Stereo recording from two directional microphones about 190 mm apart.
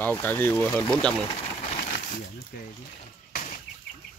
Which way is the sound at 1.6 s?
40° left (ahead or behind).